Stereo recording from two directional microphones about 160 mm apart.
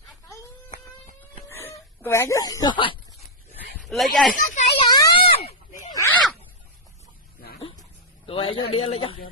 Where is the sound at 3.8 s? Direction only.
Centre (ahead or behind).